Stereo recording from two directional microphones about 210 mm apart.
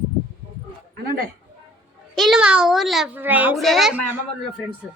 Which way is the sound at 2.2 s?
Centre (ahead or behind).